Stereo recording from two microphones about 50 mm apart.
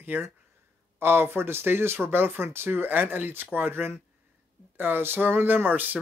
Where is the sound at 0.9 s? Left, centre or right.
Right.